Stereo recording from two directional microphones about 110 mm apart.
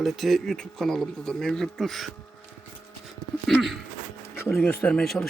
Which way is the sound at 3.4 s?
Centre (ahead or behind).